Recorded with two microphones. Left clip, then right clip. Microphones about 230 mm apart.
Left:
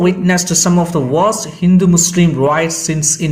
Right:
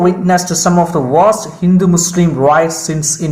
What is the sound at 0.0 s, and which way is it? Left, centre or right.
Speech, left.